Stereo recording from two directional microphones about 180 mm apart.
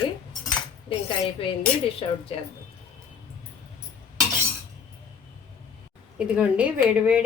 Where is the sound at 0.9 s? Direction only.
30° left (ahead or behind).